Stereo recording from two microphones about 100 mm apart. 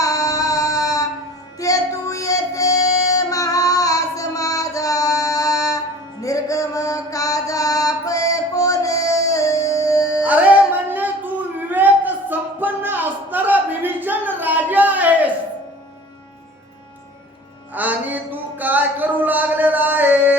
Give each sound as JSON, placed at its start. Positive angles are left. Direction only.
{"t": 0.0, "sound": "music", "side_deg": 35}
{"t": 10.2, "sound": "music", "side_deg": -15}
{"t": 17.7, "sound": "a sound", "side_deg": -15}